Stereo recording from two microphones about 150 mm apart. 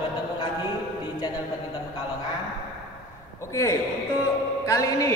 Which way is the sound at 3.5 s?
20° left (ahead or behind).